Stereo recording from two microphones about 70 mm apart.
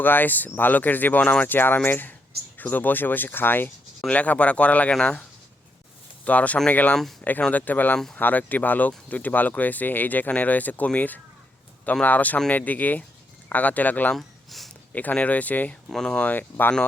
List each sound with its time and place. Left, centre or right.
0.0 s speech: left
6.2 s speech: left
14.2 s a sound: centre
14.9 s speech: left
15.9 s speech: centre
16.3 s speech: left